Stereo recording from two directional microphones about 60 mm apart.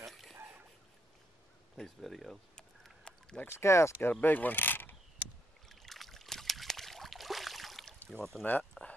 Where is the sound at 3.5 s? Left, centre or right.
Left.